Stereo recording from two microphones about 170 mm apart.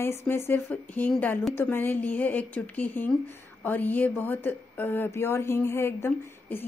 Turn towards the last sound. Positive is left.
turn(degrees=15)  # may be behind; listen again after turning